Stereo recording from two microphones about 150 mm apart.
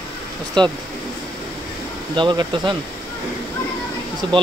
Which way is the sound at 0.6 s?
30° right (ahead or behind).